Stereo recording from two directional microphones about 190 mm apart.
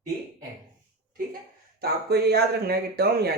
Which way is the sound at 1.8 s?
60° right (ahead or behind).